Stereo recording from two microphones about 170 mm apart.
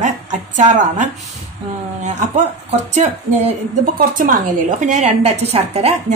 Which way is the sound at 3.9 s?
55° right (ahead or behind).